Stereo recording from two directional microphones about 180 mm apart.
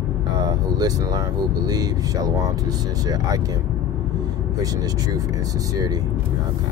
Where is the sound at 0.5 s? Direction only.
20° right (ahead or behind).